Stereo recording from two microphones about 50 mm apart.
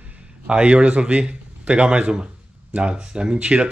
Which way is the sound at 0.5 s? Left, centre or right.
Right.